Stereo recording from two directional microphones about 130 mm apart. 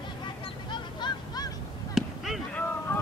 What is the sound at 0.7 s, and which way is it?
Honk, 35° left (ahead or behind).